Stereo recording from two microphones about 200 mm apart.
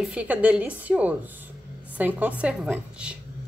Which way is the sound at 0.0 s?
5° right (ahead or behind).